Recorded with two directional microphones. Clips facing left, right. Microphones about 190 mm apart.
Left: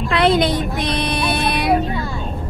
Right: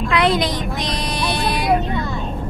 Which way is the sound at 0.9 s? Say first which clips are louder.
Left 3 dB; 65° left (ahead or behind).